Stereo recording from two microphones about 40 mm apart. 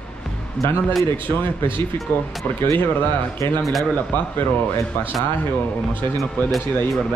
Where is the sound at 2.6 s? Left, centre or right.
Left.